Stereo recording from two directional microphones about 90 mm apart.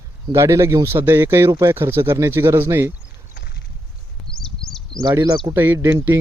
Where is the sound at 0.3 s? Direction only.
30° right (ahead or behind).